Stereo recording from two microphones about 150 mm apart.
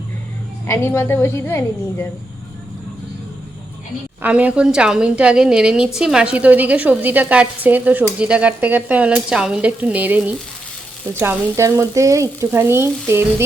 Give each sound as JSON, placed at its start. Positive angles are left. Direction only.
{"t": 0.7, "sound": "a woman's voice", "side_deg": 15}
{"t": 4.2, "sound": "a woman's voice", "side_deg": -10}